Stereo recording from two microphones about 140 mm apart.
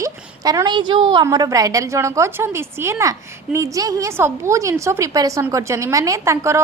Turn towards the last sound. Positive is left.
turn(degrees=-20)  # may be behind; listen again after turning